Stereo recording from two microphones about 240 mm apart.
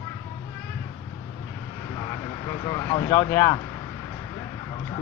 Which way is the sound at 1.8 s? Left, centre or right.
Centre.